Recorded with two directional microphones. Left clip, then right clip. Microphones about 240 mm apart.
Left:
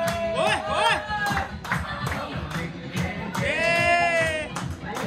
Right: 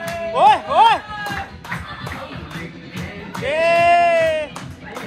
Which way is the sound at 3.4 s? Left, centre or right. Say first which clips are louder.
Right 7 dB; centre.